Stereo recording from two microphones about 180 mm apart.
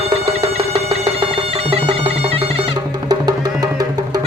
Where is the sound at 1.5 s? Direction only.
35° right (ahead or behind).